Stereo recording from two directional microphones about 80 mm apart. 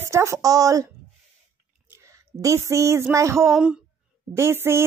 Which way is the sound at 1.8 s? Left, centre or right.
Right.